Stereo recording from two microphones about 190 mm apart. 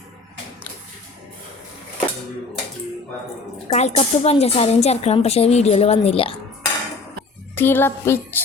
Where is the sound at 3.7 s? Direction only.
35° left (ahead or behind).